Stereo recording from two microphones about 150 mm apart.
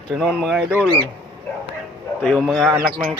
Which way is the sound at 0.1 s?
Centre (ahead or behind).